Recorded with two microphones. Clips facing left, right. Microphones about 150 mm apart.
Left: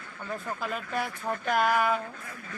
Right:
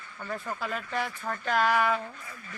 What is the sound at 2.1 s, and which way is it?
Speech, 60° left (ahead or behind).